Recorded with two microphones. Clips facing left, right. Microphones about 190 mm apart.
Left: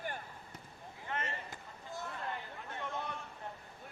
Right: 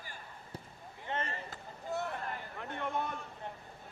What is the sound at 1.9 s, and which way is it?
Hubbub, 65° right (ahead or behind).